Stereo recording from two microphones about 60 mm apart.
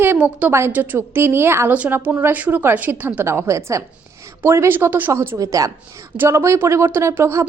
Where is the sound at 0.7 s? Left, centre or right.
Right.